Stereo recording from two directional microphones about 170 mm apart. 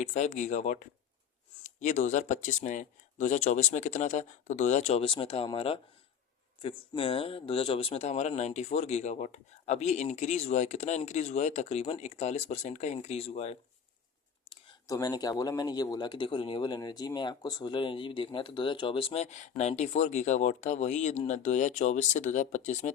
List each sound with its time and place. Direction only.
0.0 s speech: 40° left (ahead or behind)
14.5 s a sound: 30° left (ahead or behind)
14.9 s speech: 20° left (ahead or behind); by 22.9 s 45° left (ahead or behind)